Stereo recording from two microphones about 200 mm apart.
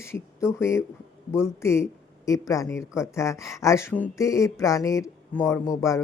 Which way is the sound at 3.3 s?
Centre (ahead or behind).